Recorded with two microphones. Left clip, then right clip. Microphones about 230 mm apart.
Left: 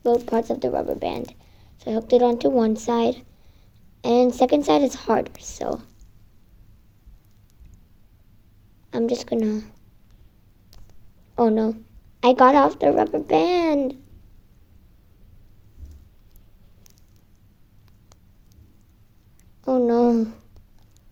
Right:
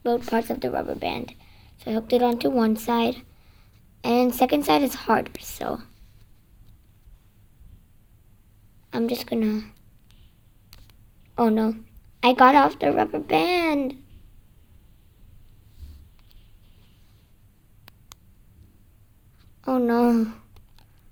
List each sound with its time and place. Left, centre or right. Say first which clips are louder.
0.0 s speech: left 3 dB; right
8.9 s speech: left 3 dB; right
11.3 s speech: left 2 dB; right
19.6 s speech: left 3 dB; right